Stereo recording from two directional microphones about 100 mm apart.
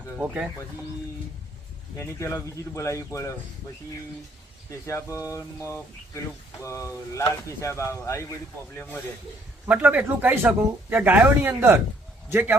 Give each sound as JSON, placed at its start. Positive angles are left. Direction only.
{"t": 0.2, "sound": "speech", "side_deg": -10}
{"t": 2.0, "sound": "speech", "side_deg": 30}
{"t": 4.9, "sound": "speech", "side_deg": 30}
{"t": 9.6, "sound": "a man's voice", "side_deg": -15}